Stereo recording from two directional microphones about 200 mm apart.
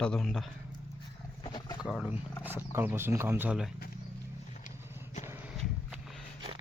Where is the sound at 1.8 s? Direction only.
5° right (ahead or behind).